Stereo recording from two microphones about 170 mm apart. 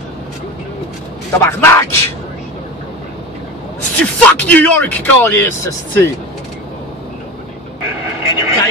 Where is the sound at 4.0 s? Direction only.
10° left (ahead or behind).